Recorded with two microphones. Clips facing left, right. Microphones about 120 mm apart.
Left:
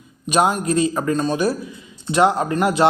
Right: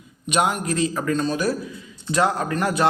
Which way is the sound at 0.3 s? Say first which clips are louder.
Left 4 dB; 30° left (ahead or behind).